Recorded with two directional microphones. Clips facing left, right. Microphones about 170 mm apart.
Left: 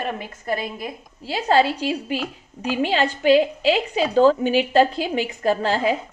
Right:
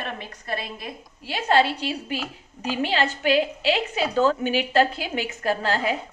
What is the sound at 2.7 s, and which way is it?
A woman's voice, 35° left (ahead or behind).